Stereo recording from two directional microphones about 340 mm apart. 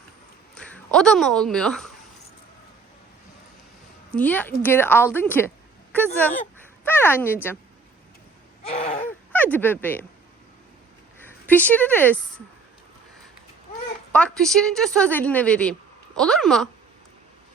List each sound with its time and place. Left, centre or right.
0.5 s speech: centre
4.1 s a woman's voice: centre
6.8 s a woman's voice: centre
8.6 s a sound: centre
9.0 s speech: centre
11.2 s a woman's voice: centre
14.1 s a woman's voice: centre